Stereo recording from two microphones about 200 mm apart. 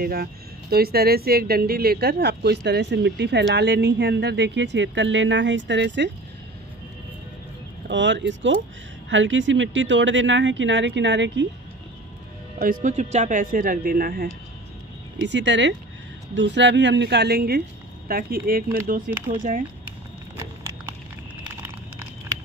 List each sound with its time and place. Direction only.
0.0 s speech: 50° right (ahead or behind)
7.9 s speech: 65° right (ahead or behind)
12.5 s speech: 45° right (ahead or behind)
15.1 s speech: 60° right (ahead or behind); by 19.6 s 45° right (ahead or behind)